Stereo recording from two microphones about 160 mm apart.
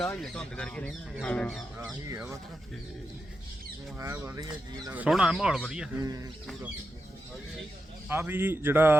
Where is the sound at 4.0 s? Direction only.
15° right (ahead or behind).